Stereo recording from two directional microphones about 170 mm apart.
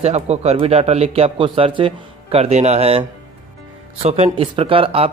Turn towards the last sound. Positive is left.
turn(degrees=-35)  # may be behind; listen again after turning